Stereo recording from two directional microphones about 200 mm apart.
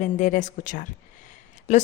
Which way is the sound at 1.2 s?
35° left (ahead or behind).